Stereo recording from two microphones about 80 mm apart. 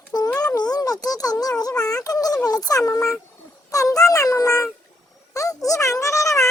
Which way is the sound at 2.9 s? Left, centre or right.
Left.